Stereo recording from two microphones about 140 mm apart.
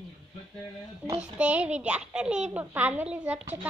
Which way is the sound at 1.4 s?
10° right (ahead or behind).